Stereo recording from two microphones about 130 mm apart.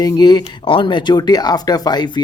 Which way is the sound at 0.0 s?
30° left (ahead or behind).